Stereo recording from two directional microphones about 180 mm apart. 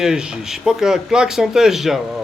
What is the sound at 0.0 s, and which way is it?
Speech, 5° right (ahead or behind).